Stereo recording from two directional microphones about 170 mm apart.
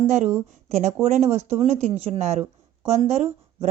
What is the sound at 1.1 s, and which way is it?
Speech, 40° right (ahead or behind).